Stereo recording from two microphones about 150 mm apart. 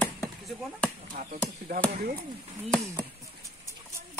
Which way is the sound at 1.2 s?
65° right (ahead or behind).